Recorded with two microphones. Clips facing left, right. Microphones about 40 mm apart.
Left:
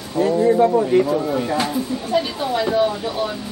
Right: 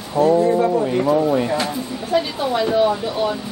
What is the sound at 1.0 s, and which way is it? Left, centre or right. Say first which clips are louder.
Speech: right 4 dB; centre.